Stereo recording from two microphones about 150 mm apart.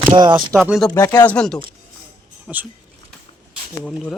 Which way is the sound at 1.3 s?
5° left (ahead or behind).